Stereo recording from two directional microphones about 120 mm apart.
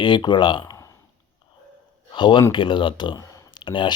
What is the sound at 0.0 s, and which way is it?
Speech, 40° left (ahead or behind).